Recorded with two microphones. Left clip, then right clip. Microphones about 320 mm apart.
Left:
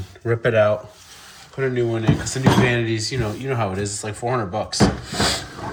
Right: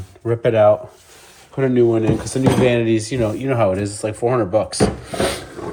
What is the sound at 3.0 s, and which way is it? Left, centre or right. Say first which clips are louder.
Speech: right 5 dB; centre.